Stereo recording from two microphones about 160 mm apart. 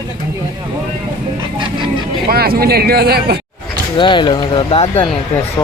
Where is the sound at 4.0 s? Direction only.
30° left (ahead or behind).